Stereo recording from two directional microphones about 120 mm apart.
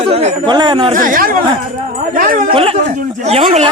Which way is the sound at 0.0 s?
60° right (ahead or behind).